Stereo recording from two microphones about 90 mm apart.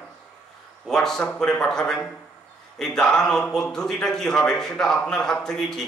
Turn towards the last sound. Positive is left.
turn(degrees=5)  # may be behind; listen again after turning